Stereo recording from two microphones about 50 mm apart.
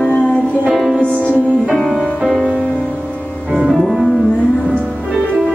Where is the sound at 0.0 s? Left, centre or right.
Left.